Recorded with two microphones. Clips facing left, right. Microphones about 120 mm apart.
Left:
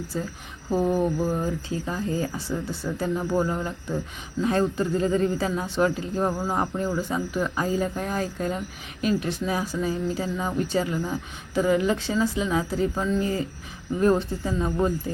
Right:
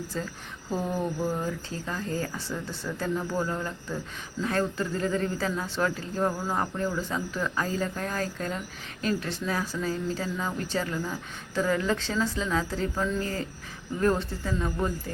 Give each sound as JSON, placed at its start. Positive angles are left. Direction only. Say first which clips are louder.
{"t": 0.1, "sound": "speech", "louder": "left 3 dB", "side_deg": 10}